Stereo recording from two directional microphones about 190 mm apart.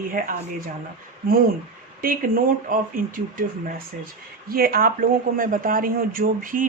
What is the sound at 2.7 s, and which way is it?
Speech, 45° right (ahead or behind).